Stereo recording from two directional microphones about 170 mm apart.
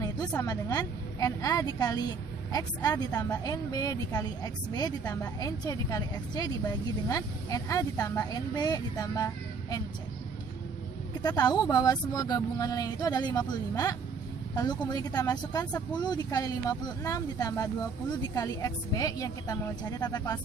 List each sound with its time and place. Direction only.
0.0 s a woman's voice: 20° left (ahead or behind)
11.2 s a woman's voice: 25° left (ahead or behind)